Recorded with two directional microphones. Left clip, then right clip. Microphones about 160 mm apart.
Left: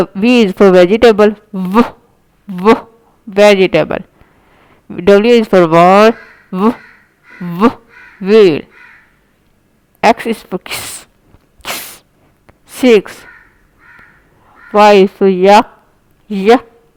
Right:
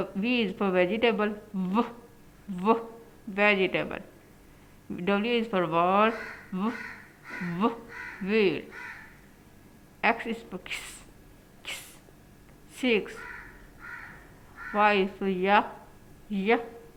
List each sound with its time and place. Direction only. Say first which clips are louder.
0.0 s a woman's voice: left 18 dB; 65° left (ahead or behind)
3.3 s speech: left 17 dB; 60° left (ahead or behind)
5.5 s a woman's voice: left 17 dB; 50° left (ahead or behind); by 7.8 s 65° left (ahead or behind)
10.0 s a woman's voice: left 17 dB; 70° left (ahead or behind)
12.8 s speech: left 18 dB; 65° left (ahead or behind)
14.7 s speech: left 18 dB; 65° left (ahead or behind)